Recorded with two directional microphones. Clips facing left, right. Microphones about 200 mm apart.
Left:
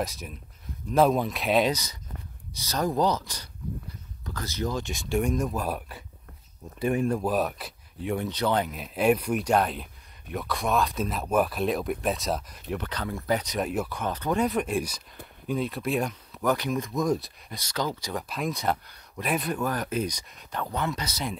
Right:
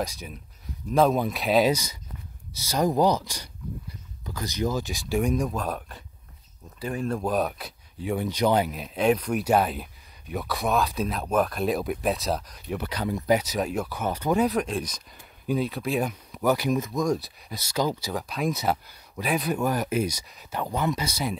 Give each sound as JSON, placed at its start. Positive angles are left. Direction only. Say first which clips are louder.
{"t": 0.0, "sound": "speech", "louder": "right 1 dB", "side_deg": 0}
{"t": 6.8, "sound": "speech", "louder": "left 4 dB", "side_deg": 20}
{"t": 7.2, "sound": "speech", "louder": "right 1 dB", "side_deg": 5}
{"t": 8.3, "sound": "speech", "louder": "right 6 dB", "side_deg": -10}
{"t": 9.4, "sound": "speech", "louder": "right 2 dB", "side_deg": -5}
{"t": 15.4, "sound": "speech", "louder": "right 2 dB", "side_deg": 0}
{"t": 16.9, "sound": "speech", "louder": "right 1 dB", "side_deg": 5}
{"t": 19.6, "sound": "speech", "louder": "right 3 dB", "side_deg": -10}